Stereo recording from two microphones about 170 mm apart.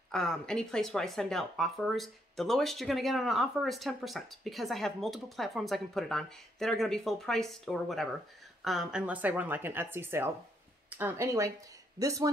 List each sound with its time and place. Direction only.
0.1 s speech: 5° left (ahead or behind); by 12.3 s 20° right (ahead or behind)